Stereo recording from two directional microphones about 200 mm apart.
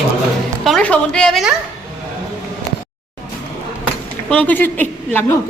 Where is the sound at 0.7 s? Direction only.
5° left (ahead or behind).